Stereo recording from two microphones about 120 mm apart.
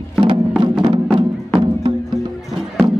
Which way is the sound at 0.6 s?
40° right (ahead or behind).